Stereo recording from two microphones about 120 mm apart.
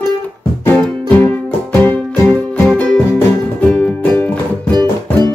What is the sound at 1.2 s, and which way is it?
Music, 15° left (ahead or behind).